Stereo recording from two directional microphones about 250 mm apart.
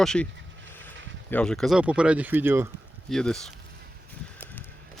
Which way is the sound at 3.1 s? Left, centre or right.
Centre.